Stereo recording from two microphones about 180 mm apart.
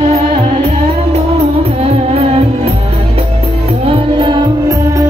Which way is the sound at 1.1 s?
35° right (ahead or behind).